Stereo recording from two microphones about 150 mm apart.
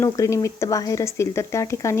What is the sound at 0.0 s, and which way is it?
Speech, 20° left (ahead or behind).